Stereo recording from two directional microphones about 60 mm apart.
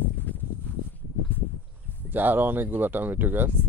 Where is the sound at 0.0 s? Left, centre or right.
Left.